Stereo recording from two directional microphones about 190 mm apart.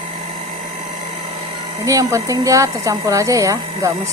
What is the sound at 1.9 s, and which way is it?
Speech, 15° right (ahead or behind).